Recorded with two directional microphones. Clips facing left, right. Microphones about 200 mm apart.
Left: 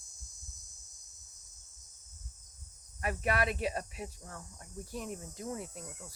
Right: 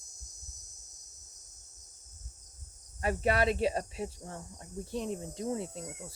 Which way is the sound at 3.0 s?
30° right (ahead or behind).